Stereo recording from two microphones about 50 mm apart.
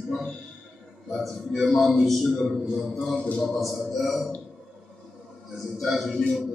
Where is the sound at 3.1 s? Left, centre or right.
Centre.